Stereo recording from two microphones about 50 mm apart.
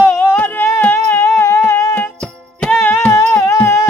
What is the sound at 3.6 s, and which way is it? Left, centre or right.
Music, left.